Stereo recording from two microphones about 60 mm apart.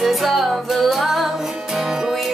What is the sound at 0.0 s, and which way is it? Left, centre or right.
Music, centre.